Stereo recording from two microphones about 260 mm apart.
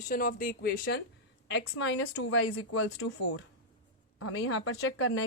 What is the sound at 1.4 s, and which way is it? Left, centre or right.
Speech, left.